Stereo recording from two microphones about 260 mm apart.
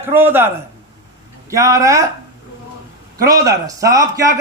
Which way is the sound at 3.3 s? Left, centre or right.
Centre.